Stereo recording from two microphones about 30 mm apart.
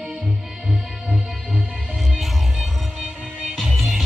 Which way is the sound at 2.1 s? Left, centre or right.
Centre.